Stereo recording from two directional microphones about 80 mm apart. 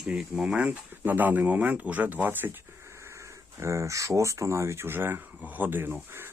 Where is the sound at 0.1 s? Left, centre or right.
Centre.